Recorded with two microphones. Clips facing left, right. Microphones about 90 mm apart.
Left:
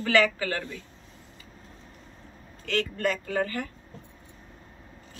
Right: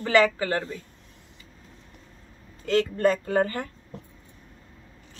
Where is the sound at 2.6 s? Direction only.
25° right (ahead or behind).